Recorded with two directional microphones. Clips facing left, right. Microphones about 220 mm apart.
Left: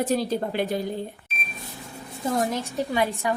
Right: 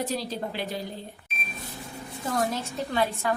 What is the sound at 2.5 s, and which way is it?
Speech, 15° left (ahead or behind).